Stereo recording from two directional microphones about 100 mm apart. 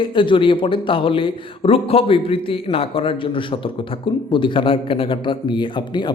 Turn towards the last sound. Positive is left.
turn(degrees=50)  # may be behind; listen again after turning